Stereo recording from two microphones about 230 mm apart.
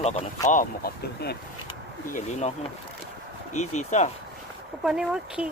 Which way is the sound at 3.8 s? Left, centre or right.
Left.